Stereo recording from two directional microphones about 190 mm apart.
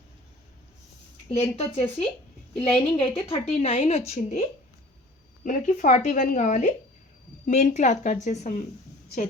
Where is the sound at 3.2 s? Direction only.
30° left (ahead or behind).